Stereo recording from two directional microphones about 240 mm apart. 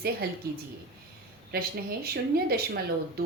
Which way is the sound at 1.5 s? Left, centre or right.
Right.